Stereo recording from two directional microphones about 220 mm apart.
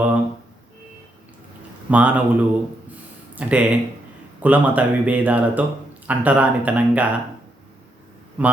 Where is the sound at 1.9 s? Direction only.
5° right (ahead or behind).